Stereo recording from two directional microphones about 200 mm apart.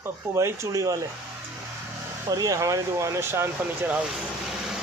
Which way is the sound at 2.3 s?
15° right (ahead or behind).